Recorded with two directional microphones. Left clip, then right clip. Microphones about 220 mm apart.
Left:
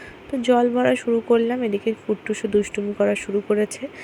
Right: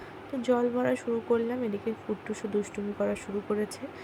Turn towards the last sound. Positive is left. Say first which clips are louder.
# left 10 dB
turn(degrees=20)  # may be behind; listen again after turning